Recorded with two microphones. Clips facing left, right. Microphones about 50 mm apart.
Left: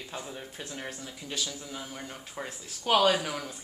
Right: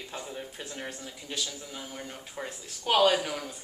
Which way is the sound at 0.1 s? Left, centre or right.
Centre.